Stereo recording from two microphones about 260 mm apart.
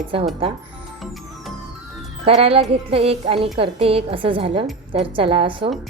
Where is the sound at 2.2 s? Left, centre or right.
Right.